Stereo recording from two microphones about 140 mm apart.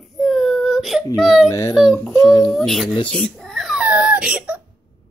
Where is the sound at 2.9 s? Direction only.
35° left (ahead or behind).